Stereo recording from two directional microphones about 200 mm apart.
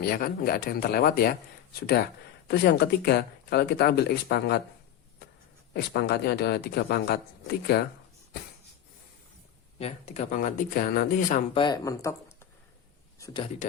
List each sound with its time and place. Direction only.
0.0 s speech: 45° left (ahead or behind)
2.5 s speech: 55° left (ahead or behind)
5.7 s speech: 50° left (ahead or behind)
9.7 s speech: 30° left (ahead or behind)
11.5 s speech: 20° left (ahead or behind)
13.1 s a sound: 15° left (ahead or behind)